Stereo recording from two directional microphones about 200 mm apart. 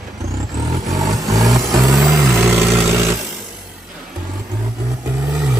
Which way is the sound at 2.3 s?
Centre (ahead or behind).